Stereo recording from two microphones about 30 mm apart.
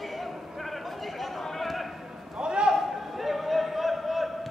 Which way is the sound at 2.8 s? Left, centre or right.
Centre.